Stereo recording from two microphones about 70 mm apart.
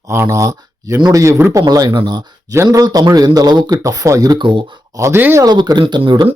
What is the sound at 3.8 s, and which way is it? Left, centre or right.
Speech, right.